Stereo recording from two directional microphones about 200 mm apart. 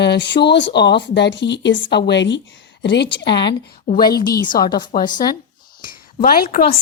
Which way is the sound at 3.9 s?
45° left (ahead or behind).